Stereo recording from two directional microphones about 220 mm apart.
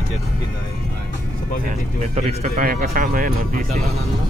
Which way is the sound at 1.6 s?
30° right (ahead or behind).